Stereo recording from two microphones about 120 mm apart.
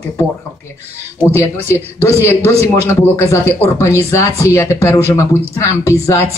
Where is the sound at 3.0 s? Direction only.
25° left (ahead or behind).